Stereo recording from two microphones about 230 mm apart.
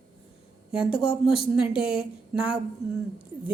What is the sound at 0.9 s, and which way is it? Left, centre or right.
Speech, left.